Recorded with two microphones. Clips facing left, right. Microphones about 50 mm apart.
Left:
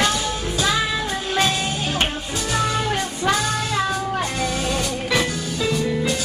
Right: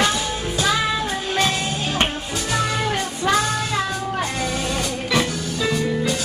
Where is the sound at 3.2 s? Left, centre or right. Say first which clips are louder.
Right 2 dB; centre.